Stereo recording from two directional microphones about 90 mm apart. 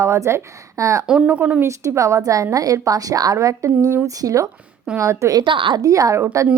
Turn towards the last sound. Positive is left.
turn(degrees=-35)  # may be behind; listen again after turning